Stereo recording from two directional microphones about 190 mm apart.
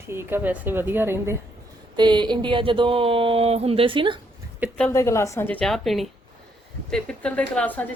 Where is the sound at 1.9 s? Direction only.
25° right (ahead or behind).